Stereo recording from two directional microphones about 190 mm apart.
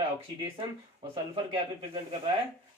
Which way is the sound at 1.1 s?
30° right (ahead or behind).